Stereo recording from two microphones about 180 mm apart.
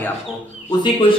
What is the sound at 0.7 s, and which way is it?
Speech, 25° left (ahead or behind).